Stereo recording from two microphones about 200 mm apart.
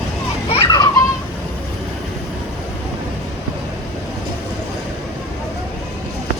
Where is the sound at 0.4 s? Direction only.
25° left (ahead or behind).